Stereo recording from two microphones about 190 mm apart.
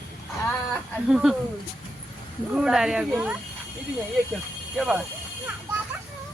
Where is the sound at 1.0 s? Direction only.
5° right (ahead or behind).